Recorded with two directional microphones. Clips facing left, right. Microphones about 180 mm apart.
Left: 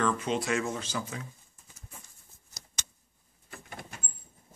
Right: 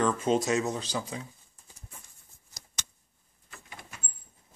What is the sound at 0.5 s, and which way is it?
Speech, 20° right (ahead or behind).